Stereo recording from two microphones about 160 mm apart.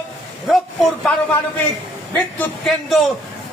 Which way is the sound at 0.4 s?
Centre (ahead or behind).